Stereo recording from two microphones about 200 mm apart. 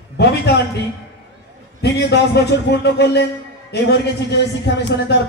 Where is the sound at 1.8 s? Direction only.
55° left (ahead or behind).